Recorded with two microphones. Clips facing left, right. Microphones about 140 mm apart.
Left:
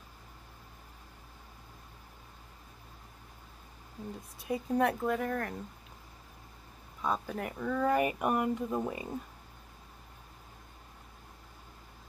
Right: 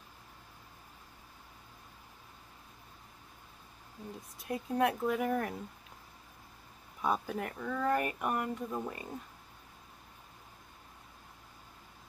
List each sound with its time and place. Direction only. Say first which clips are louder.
4.5 s speech: left 2 dB; centre (ahead or behind)
7.0 s speech: right 1 dB; 5° right (ahead or behind); by 9.0 s 15° left (ahead or behind)